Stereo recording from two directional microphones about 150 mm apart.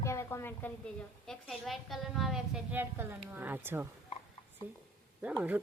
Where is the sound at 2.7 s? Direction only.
15° right (ahead or behind).